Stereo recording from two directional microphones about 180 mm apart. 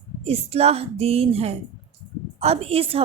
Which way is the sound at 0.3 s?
35° right (ahead or behind).